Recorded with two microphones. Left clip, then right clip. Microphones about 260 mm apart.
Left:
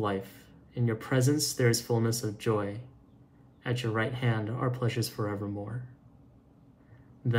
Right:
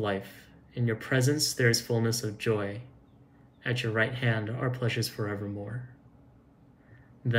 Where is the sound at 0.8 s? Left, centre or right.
Left.